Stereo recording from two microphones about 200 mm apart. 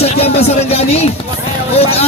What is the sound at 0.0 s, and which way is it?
Speech, 30° left (ahead or behind).